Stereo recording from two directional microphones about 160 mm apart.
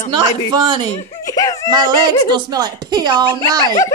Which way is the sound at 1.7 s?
25° right (ahead or behind).